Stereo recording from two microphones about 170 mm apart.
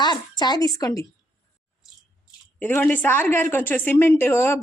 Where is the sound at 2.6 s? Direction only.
10° left (ahead or behind).